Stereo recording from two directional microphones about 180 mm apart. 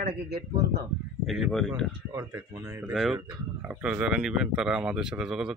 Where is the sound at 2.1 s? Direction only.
15° right (ahead or behind).